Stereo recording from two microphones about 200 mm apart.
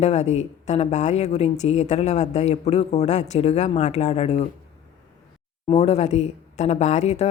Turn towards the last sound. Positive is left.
turn(degrees=35)  # may be behind; listen again after turning